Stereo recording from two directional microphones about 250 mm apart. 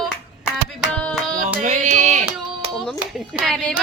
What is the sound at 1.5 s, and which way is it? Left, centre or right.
Carnatic music, right.